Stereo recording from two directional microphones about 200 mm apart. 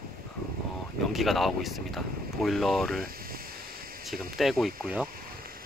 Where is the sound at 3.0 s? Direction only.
45° right (ahead or behind).